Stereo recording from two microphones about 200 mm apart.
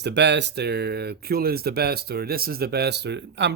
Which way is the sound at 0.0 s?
60° right (ahead or behind).